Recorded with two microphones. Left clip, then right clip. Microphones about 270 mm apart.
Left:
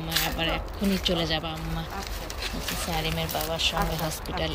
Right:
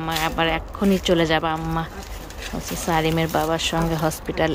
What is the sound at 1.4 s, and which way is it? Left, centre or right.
Speech, right.